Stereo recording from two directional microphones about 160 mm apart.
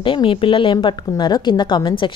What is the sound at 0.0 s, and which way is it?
A woman's voice, 30° left (ahead or behind).